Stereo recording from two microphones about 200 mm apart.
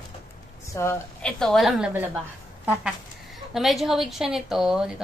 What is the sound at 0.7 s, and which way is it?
Speech, 15° left (ahead or behind).